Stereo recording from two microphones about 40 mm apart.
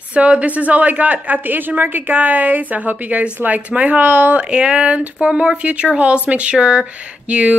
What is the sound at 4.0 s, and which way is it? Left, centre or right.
Speech, right.